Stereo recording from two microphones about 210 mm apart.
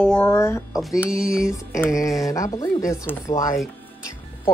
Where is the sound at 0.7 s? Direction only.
5° right (ahead or behind).